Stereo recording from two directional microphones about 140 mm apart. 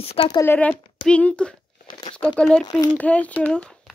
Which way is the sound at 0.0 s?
45° left (ahead or behind).